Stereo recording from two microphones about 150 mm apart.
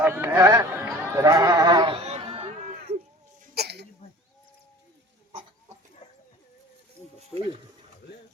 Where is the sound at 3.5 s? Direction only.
90° right.